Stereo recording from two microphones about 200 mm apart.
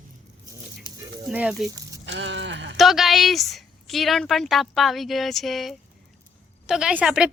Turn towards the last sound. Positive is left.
turn(degrees=-5)  # may be behind; listen again after turning